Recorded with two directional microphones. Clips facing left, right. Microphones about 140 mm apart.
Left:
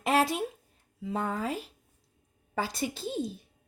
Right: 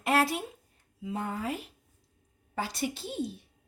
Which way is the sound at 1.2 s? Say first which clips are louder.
Left 3 dB; 90° left.